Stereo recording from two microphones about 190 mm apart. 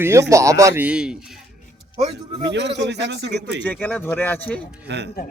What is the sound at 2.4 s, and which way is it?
Speech, 65° right (ahead or behind).